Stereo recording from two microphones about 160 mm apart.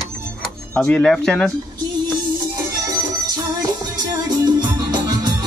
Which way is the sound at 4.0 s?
25° right (ahead or behind).